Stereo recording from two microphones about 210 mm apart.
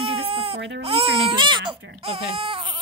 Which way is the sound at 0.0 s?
30° right (ahead or behind).